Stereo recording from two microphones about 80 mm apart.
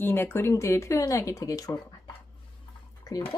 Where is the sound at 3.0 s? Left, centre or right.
Left.